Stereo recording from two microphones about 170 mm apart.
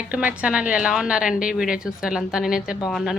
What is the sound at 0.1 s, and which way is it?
A woman's voice, 10° right (ahead or behind).